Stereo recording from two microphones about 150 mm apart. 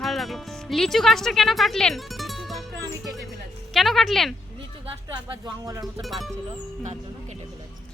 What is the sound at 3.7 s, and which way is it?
Speech, centre (ahead or behind).